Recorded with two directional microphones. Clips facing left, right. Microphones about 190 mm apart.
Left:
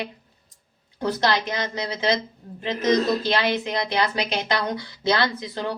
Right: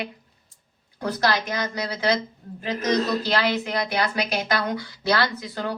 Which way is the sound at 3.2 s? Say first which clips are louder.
Left 1 dB; 20° left (ahead or behind).